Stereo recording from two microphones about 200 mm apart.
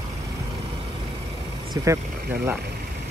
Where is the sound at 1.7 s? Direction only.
15° right (ahead or behind).